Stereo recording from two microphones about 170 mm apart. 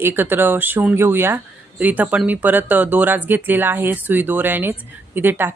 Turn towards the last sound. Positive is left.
turn(degrees=-10)  # may be behind; listen again after turning